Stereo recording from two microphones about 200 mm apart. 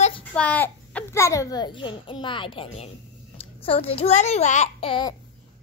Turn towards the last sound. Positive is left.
turn(degrees=25)  # may be behind; listen again after turning